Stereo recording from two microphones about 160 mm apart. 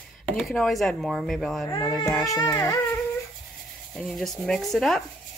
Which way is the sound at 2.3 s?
20° left (ahead or behind).